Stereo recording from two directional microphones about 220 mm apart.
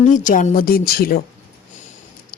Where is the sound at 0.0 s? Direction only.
35° left (ahead or behind).